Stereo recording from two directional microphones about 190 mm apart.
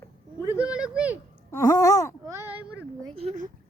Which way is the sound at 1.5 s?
15° left (ahead or behind).